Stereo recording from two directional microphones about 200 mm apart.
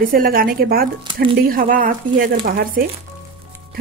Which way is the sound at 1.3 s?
45° right (ahead or behind).